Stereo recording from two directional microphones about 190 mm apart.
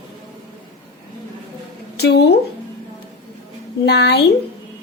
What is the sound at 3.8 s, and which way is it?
Speech, 60° left (ahead or behind).